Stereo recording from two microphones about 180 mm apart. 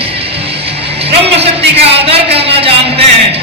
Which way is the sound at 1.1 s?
35° right (ahead or behind).